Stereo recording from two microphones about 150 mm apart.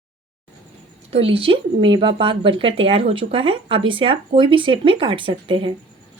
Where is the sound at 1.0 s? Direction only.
40° right (ahead or behind).